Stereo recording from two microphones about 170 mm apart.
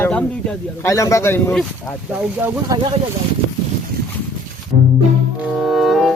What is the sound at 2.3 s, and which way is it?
Speech, 10° right (ahead or behind).